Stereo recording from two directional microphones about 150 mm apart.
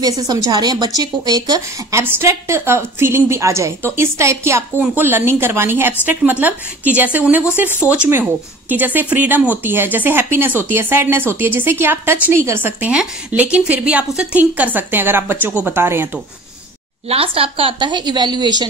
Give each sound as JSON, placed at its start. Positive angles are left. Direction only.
{"t": 0.3, "sound": "a woman's voice", "side_deg": -25}
{"t": 17.1, "sound": "a woman's voice", "side_deg": -40}